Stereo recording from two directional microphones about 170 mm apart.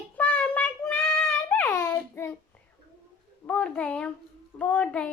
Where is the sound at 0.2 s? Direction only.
10° left (ahead or behind).